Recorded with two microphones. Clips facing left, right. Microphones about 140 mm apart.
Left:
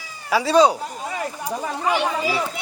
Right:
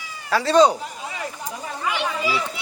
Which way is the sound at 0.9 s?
45° left (ahead or behind).